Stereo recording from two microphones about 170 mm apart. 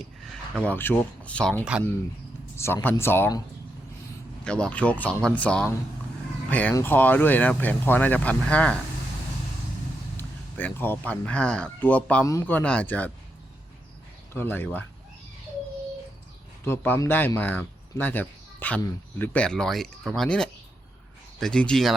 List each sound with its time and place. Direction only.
0.5 s speech: 10° left (ahead or behind)
4.4 s speech: 5° left (ahead or behind)
10.2 s speech: 10° left (ahead or behind)
14.3 s speech: 10° left (ahead or behind)
16.6 s speech: 10° left (ahead or behind)